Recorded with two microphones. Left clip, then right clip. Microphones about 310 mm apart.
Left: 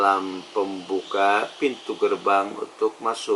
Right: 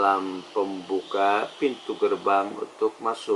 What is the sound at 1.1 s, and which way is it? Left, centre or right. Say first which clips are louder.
Speech: left 3 dB; centre.